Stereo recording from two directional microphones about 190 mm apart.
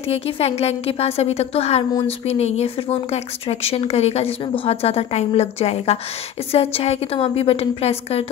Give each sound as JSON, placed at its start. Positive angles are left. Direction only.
{"t": 0.1, "sound": "speech", "side_deg": 35}